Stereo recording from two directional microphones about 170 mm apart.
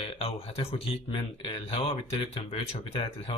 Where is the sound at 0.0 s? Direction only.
35° left (ahead or behind).